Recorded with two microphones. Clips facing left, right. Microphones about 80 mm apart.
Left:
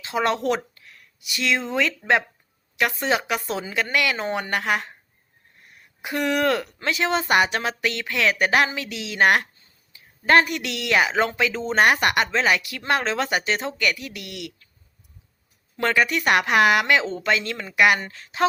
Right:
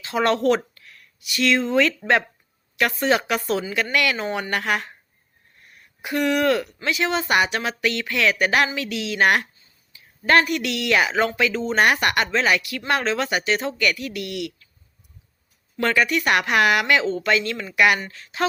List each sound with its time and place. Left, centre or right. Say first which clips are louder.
0.0 s speech: right 3 dB; centre
0.7 s a sound: right 1 dB; left
2.7 s speech: right 2 dB; centre
6.0 s speech: right 2 dB; left
15.8 s speech: right 1 dB; left